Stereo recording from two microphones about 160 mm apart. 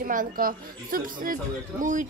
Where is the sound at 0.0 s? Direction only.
60° right (ahead or behind).